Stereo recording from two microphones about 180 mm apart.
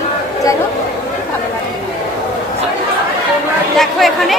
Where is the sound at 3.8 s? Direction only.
Centre (ahead or behind).